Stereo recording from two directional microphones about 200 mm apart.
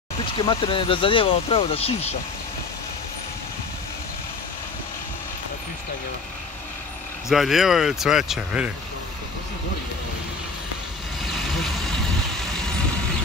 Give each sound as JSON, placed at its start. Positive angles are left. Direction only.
{"t": 0.2, "sound": "speech", "side_deg": 25}
{"t": 7.2, "sound": "speech", "side_deg": 0}